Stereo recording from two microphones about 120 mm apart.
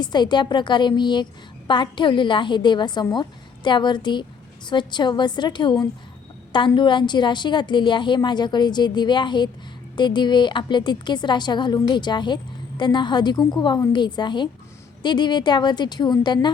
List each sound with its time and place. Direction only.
0.0 s a woman's voice: 40° left (ahead or behind)
6.7 s a woman's voice: 40° left (ahead or behind)